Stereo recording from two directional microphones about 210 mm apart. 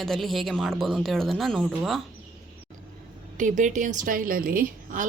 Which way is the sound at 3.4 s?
35° right (ahead or behind).